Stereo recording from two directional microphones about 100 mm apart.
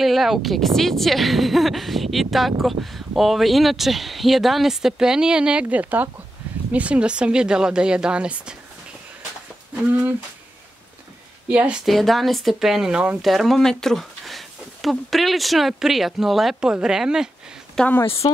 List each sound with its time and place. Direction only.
0.0 s speech: centre (ahead or behind)
11.4 s speech: 15° right (ahead or behind)
11.8 s speech: centre (ahead or behind)
18.0 s speech: 70° left (ahead or behind)